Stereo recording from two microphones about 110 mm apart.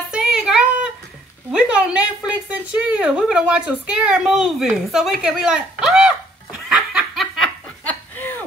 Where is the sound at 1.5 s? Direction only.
10° right (ahead or behind).